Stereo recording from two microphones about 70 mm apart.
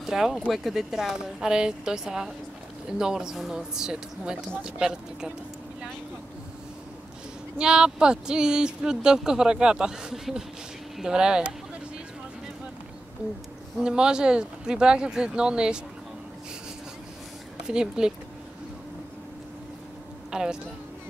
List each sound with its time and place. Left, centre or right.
0.0 s speech: centre
7.5 s speech: centre
13.7 s speech: centre
17.6 s speech: centre
20.2 s a woman's voice: centre